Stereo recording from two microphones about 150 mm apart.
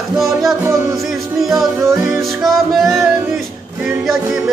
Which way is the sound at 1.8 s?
20° right (ahead or behind).